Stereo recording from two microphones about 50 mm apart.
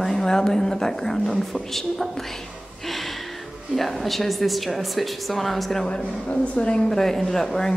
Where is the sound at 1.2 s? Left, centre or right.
Centre.